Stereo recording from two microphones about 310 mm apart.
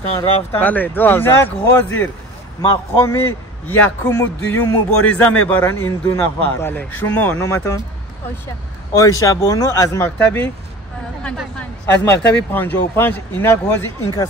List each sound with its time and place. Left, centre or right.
0.2 s speech: centre
8.9 s speech: centre